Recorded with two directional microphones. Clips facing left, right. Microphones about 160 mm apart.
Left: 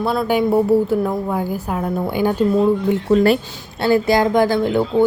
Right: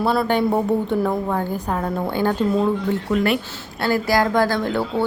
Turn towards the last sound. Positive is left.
turn(degrees=15)  # may be behind; listen again after turning